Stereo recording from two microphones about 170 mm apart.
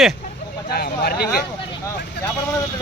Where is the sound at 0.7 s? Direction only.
65° left (ahead or behind).